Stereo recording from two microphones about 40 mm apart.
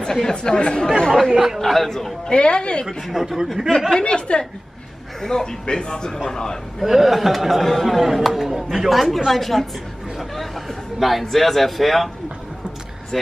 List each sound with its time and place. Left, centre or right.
0.0 s a woman's voice: centre
0.8 s speech: centre
1.3 s speech: centre
1.6 s speech: centre
2.2 s a woman's voice: left
3.1 s speech: centre
4.0 s a woman's voice: left
6.8 s a man's voice: centre
13.1 s speech: centre